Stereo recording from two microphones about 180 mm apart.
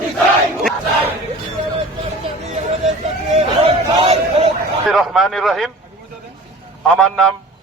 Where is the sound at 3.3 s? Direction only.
35° right (ahead or behind).